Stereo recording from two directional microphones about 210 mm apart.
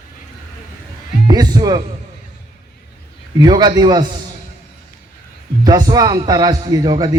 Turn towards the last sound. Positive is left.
turn(degrees=-20)  # may be behind; listen again after turning